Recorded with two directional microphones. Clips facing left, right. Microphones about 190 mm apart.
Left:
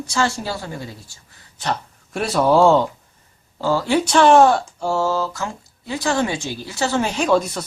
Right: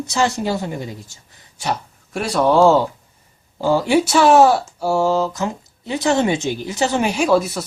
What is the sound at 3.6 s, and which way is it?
Speech, 15° right (ahead or behind).